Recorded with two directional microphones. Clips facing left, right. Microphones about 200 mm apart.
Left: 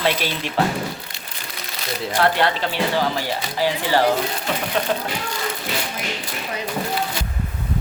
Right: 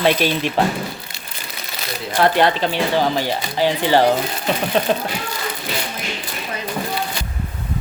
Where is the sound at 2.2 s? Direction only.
15° right (ahead or behind).